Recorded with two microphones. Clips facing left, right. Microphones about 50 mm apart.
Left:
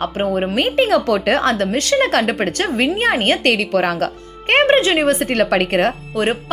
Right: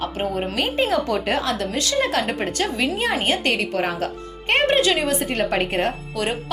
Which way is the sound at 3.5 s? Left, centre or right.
Left.